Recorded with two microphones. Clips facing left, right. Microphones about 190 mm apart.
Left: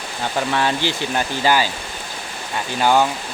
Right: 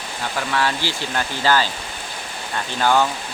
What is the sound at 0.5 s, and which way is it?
Speech, 20° left (ahead or behind).